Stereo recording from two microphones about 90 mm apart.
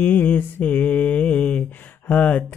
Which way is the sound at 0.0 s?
20° left (ahead or behind).